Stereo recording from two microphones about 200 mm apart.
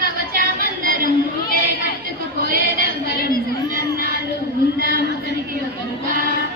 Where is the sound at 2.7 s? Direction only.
50° left (ahead or behind).